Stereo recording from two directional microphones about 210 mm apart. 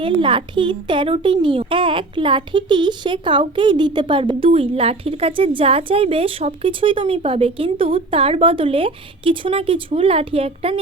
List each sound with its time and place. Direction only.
0.0 s a child's voice: 25° right (ahead or behind)